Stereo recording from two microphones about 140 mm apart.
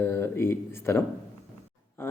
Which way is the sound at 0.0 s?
15° left (ahead or behind).